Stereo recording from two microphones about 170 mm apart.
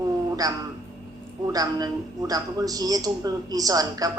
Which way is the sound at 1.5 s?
20° right (ahead or behind).